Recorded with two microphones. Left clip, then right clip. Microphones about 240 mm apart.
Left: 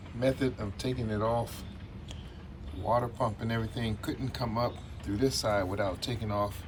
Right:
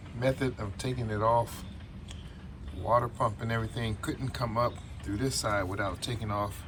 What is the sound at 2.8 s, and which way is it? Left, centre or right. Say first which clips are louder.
A man's voice: right 2 dB; centre.